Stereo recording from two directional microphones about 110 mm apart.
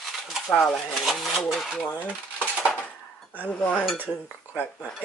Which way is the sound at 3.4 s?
10° left (ahead or behind).